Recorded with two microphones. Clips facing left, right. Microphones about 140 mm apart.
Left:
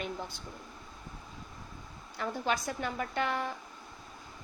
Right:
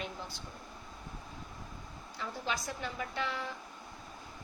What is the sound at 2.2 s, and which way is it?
A woman's voice, 55° left (ahead or behind).